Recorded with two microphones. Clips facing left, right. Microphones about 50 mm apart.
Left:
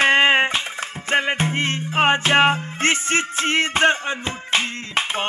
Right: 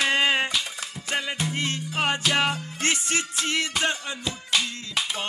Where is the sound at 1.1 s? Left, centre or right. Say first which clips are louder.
Left 8 dB; left.